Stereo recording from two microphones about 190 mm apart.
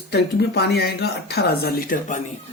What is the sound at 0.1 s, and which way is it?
Speech, 60° left (ahead or behind).